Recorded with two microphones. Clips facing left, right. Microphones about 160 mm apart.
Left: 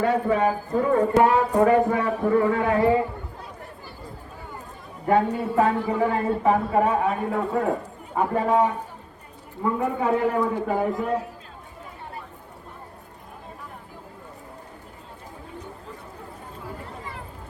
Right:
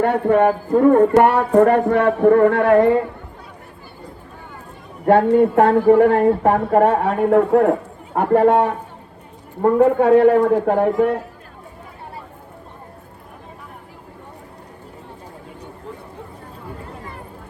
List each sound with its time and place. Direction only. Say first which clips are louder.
0.0 s speech: right 6 dB; 60° right (ahead or behind)
5.0 s speech: right 9 dB; 70° right (ahead or behind)